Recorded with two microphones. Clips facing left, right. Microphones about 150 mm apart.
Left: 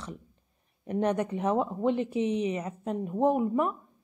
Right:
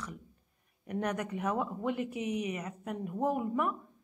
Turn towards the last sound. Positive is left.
turn(degrees=25)  # may be behind; listen again after turning